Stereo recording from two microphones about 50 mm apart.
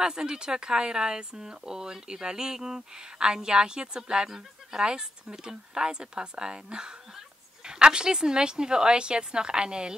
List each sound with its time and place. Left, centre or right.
0.0 s speech: centre